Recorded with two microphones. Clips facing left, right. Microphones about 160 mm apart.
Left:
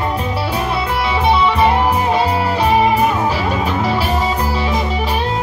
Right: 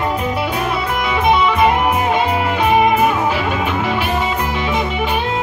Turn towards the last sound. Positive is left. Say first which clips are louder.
# left 1 dB
turn(degrees=35)  # may be behind; listen again after turning